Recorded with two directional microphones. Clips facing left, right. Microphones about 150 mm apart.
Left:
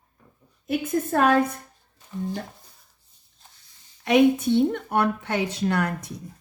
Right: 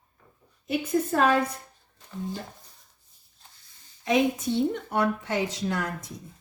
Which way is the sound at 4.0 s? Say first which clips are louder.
Left 6 dB; 65° left (ahead or behind).